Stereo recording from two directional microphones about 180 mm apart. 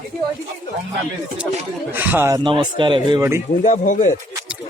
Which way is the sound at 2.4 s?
25° right (ahead or behind).